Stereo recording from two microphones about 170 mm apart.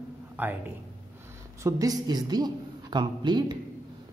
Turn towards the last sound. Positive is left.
turn(degrees=-25)  # may be behind; listen again after turning